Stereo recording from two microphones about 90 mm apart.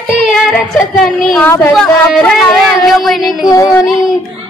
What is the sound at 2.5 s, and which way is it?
Child singing, centre (ahead or behind).